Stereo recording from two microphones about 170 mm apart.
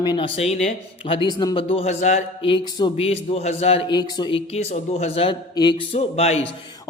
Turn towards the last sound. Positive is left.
turn(degrees=40)  # may be behind; listen again after turning